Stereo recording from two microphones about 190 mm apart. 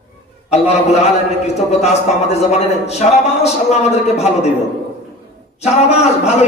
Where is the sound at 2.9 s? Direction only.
35° left (ahead or behind).